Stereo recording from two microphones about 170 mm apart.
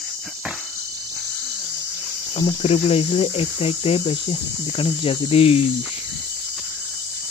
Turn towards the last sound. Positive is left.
turn(degrees=35)  # may be behind; listen again after turning